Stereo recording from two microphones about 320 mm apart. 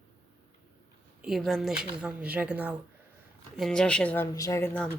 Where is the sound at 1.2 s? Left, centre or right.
Centre.